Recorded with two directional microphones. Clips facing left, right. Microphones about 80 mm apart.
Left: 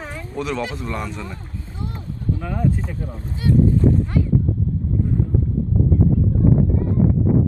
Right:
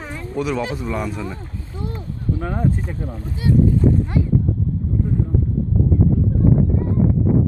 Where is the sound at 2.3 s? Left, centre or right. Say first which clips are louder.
Right 1 dB; right.